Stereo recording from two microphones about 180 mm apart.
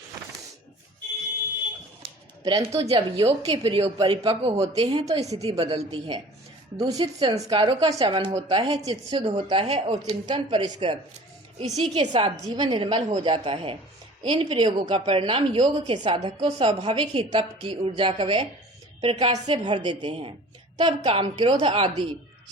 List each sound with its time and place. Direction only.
2.4 s speech: 20° right (ahead or behind)
2.9 s a woman's voice: 35° right (ahead or behind)
5.5 s a woman's voice: 35° right (ahead or behind)
8.3 s a woman's voice: 15° right (ahead or behind)
8.5 s a woman's voice: 35° right (ahead or behind)